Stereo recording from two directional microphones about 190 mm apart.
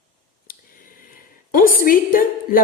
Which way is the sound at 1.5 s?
50° left (ahead or behind).